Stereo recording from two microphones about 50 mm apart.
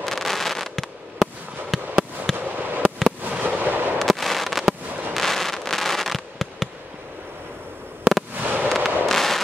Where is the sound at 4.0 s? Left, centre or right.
Centre.